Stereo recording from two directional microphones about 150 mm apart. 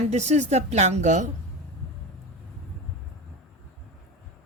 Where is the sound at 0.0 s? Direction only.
50° right (ahead or behind).